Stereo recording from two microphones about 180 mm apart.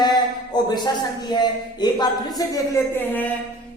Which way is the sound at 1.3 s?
25° left (ahead or behind).